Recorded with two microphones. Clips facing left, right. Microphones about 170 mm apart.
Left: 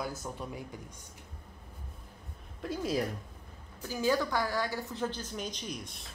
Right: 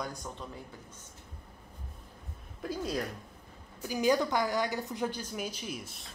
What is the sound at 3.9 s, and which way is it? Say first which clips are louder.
A woman's voice: right 2 dB; 15° right (ahead or behind).